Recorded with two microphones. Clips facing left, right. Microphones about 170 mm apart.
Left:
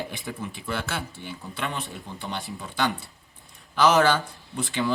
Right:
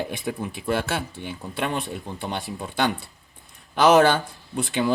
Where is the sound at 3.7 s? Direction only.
55° right (ahead or behind).